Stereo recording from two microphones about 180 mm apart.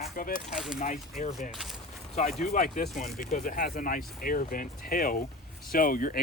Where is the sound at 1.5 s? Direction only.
Centre (ahead or behind).